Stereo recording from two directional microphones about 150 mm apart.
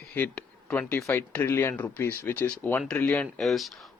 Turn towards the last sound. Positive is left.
turn(degrees=0)  # may be behind; listen again after turning